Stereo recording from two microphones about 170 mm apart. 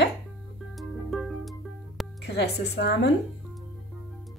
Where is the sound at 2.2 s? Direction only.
80° left.